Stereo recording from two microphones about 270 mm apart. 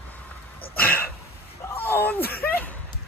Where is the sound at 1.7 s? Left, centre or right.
Centre.